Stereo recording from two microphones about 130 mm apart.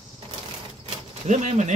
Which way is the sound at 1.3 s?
70° right (ahead or behind).